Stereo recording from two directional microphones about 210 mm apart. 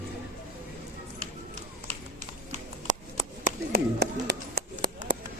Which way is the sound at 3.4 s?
50° right (ahead or behind).